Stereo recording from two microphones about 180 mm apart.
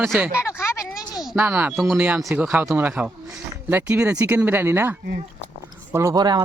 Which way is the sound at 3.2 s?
10° right (ahead or behind).